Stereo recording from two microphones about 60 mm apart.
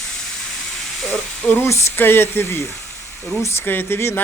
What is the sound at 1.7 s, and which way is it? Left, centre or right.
Speech, left.